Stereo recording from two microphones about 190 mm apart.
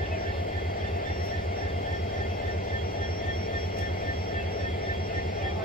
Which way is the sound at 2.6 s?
50° left (ahead or behind).